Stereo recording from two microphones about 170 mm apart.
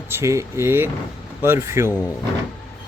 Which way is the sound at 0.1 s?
15° right (ahead or behind).